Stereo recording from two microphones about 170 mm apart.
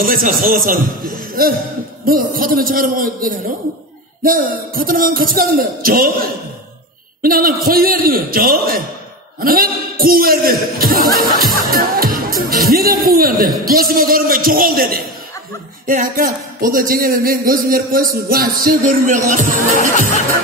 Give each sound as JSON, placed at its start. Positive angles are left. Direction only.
{"t": 0.0, "sound": "speech", "side_deg": -55}